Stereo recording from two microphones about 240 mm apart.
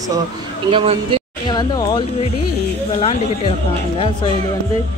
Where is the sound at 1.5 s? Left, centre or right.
Centre.